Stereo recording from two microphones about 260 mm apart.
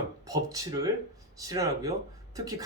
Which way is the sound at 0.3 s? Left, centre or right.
Centre.